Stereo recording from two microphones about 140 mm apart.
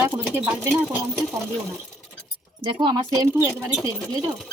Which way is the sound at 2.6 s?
35° right (ahead or behind).